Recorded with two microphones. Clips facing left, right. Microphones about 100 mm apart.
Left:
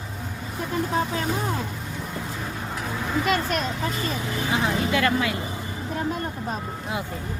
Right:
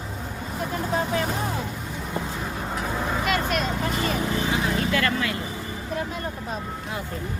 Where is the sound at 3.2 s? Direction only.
40° left (ahead or behind).